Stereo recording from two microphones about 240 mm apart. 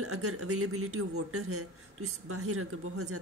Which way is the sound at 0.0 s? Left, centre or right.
Right.